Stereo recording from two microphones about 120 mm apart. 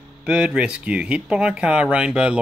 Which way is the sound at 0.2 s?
5° right (ahead or behind).